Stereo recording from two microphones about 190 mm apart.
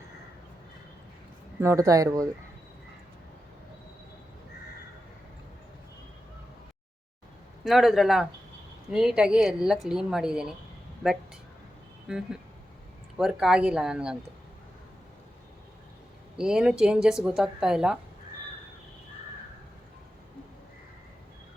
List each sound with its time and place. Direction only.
1.6 s speech: 15° right (ahead or behind)
7.6 s a woman's voice: centre (ahead or behind)
12.0 s a woman's voice: 5° right (ahead or behind)
16.4 s a woman's voice: 5° right (ahead or behind)